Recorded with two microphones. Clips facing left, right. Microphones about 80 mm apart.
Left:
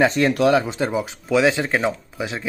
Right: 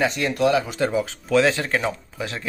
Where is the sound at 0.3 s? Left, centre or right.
Left.